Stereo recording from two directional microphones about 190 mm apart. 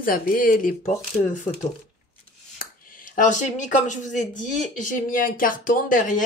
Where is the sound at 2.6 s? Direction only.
45° left (ahead or behind).